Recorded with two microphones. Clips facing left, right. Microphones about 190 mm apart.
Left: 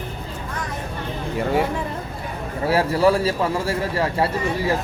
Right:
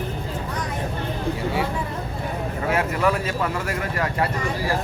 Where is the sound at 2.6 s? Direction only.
35° left (ahead or behind).